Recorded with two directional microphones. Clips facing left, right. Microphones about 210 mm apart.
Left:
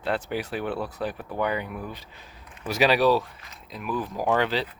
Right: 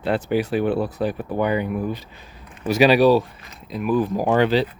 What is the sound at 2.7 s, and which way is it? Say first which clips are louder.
Speech: right 6 dB; 5° right (ahead or behind).